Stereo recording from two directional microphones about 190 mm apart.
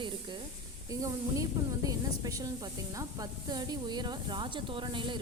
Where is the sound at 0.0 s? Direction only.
25° right (ahead or behind).